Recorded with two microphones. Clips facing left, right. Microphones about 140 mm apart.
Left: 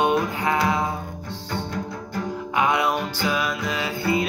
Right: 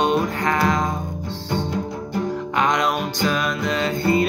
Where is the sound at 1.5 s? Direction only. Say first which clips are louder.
Right 5 dB; 20° right (ahead or behind).